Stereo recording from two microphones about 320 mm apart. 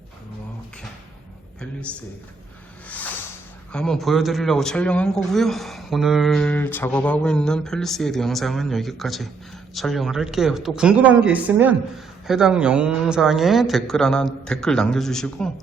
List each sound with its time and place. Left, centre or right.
3.7 s speech: centre